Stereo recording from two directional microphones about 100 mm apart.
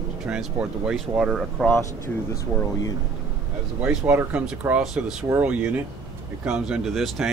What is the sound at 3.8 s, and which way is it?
Speech, 15° right (ahead or behind).